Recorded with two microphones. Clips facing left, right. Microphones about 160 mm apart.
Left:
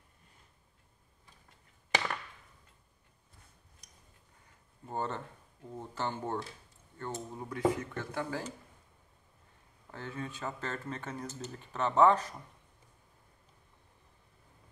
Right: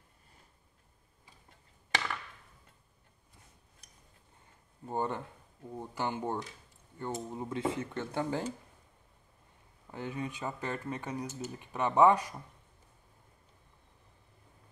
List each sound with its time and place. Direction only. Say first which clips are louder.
4.8 s speech: right 2 dB; 15° right (ahead or behind)
9.8 s speech: right 3 dB; 15° right (ahead or behind)